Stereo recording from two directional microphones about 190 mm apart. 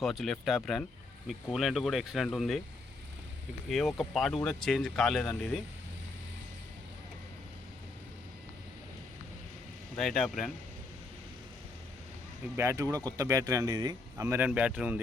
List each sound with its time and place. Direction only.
0.0 s speech: centre (ahead or behind)
3.7 s speech: centre (ahead or behind)
10.0 s speech: centre (ahead or behind)
12.5 s speech: 15° right (ahead or behind)